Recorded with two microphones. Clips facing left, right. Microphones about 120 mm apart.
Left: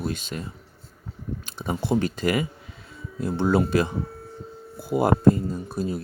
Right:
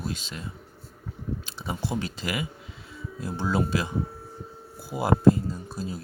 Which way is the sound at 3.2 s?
60° left (ahead or behind).